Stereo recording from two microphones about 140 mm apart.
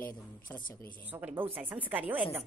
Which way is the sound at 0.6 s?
80° left.